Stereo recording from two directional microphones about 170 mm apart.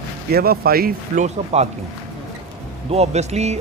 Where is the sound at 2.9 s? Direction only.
40° right (ahead or behind).